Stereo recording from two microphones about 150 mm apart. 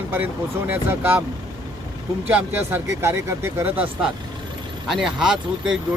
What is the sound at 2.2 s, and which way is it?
Speech, 15° right (ahead or behind).